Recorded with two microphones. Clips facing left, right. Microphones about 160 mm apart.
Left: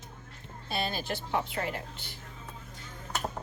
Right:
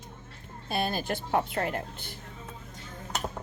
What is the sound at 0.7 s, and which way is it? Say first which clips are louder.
Speech: right 3 dB; 50° right (ahead or behind).